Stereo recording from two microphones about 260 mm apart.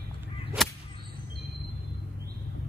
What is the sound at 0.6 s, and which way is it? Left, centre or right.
Whip, centre.